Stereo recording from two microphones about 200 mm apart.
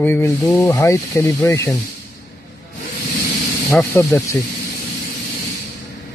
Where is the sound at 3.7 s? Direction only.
10° left (ahead or behind).